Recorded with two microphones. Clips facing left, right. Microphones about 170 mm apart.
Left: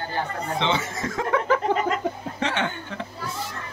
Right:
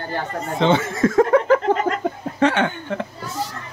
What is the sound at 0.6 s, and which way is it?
Speech, 50° right (ahead or behind).